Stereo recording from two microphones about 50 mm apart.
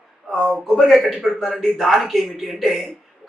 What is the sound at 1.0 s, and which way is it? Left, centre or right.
Speech, centre.